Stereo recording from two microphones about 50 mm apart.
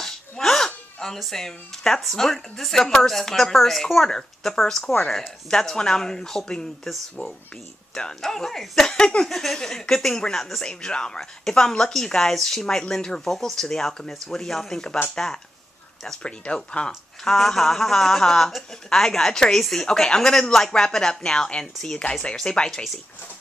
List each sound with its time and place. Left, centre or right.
0.0 s dog: centre
1.0 s a woman's voice: centre
7.9 s a woman's voice: centre
16.2 s a woman's voice: left; by 19.9 s centre
19.9 s a woman's voice: centre